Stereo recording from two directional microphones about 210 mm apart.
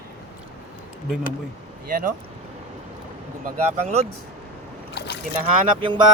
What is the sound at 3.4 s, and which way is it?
Speech, 30° right (ahead or behind).